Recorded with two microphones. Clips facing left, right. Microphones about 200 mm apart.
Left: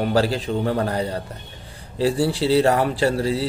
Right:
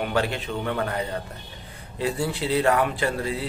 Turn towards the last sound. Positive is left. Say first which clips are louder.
# left 6 dB
turn(degrees=30)  # may be behind; listen again after turning